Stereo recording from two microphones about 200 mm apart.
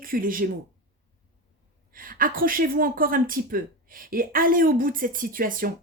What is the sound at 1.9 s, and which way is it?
A woman's voice, 45° right (ahead or behind).